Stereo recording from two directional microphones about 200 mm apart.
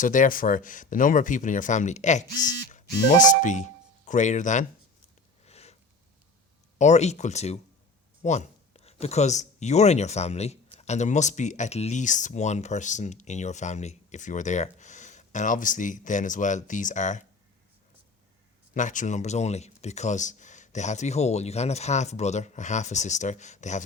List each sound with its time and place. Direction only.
0.0 s speech: 40° left (ahead or behind)
5.5 s sniff: 30° left (ahead or behind)
6.7 s speech: 35° left (ahead or behind)
18.7 s speech: 40° left (ahead or behind)